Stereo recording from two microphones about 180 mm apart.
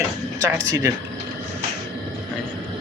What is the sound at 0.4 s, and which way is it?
Speech, 20° right (ahead or behind).